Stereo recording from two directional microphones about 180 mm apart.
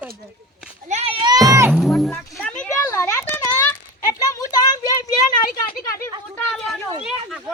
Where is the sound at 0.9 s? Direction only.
35° right (ahead or behind).